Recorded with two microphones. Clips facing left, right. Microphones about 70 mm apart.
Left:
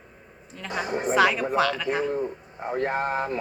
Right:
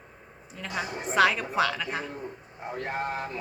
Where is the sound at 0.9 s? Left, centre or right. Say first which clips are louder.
Left 8 dB; left.